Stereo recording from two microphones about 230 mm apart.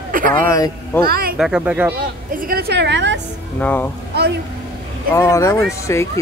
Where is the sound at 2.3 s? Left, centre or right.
Right.